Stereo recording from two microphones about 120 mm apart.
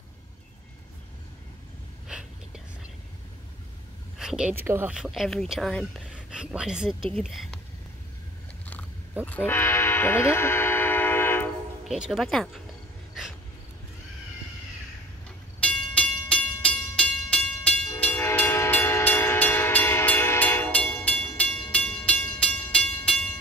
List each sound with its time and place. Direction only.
2.0 s whispering: 5° right (ahead or behind)
4.2 s a woman's voice: 5° right (ahead or behind)
4.6 s speech: 20° right (ahead or behind)
4.9 s speech: 5° right (ahead or behind)
6.1 s a woman's voice: 10° right (ahead or behind)
9.2 s train horn: 15° left (ahead or behind)
11.9 s speech: centre (ahead or behind)
15.6 s music: 10° left (ahead or behind)
18.0 s train: 15° left (ahead or behind)